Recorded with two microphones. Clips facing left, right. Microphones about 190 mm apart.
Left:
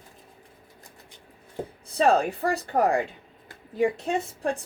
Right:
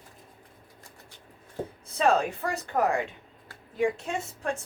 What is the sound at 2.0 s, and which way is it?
A woman's voice, 35° left (ahead or behind).